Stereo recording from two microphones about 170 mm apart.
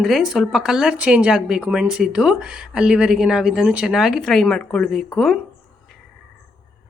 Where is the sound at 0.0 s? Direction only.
Centre (ahead or behind).